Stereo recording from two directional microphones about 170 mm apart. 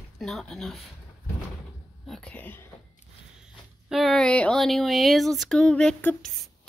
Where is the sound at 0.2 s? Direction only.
Centre (ahead or behind).